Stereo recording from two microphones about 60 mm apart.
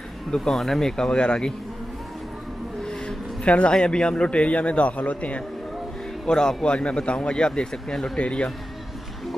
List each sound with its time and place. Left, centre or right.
0.4 s speech: centre
2.8 s a sound: centre
3.4 s a man's voice: centre
6.2 s speech: centre